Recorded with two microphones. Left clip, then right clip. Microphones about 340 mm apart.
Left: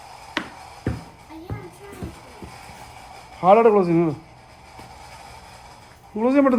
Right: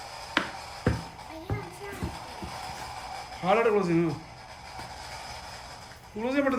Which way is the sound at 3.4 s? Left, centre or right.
Centre.